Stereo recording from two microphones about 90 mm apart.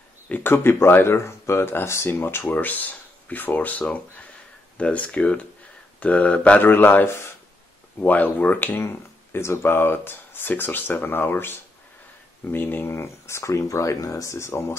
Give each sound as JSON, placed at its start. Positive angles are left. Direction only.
{"t": 0.3, "sound": "speech", "side_deg": 25}
{"t": 8.0, "sound": "speech", "side_deg": 20}